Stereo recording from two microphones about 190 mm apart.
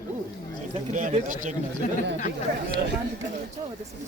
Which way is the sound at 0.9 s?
40° right (ahead or behind).